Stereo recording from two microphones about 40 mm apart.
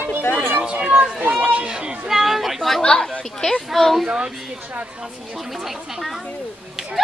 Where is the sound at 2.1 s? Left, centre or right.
Centre.